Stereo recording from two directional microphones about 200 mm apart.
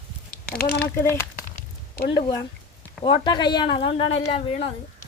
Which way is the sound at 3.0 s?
25° left (ahead or behind).